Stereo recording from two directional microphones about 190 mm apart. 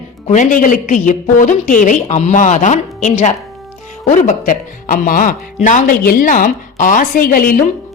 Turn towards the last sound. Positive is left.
turn(degrees=50)  # may be behind; listen again after turning